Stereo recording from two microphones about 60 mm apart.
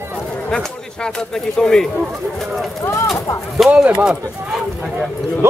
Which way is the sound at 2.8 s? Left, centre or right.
Left.